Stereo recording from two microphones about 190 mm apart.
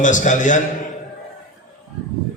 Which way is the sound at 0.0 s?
40° left (ahead or behind).